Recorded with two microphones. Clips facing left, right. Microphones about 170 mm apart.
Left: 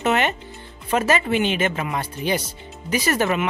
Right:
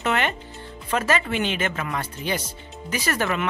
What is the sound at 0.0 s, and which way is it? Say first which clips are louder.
Music: left 3 dB; 20° left (ahead or behind).